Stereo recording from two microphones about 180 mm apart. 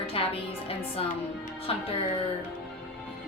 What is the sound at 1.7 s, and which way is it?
Speech, 30° left (ahead or behind).